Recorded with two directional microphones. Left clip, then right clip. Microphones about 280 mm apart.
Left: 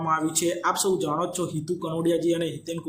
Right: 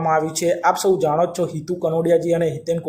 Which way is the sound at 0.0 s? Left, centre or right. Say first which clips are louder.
Right 6 dB; centre.